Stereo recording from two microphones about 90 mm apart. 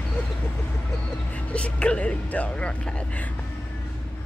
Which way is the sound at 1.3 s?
15° left (ahead or behind).